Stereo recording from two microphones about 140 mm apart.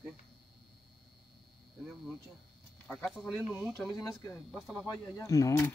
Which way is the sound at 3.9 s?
25° left (ahead or behind).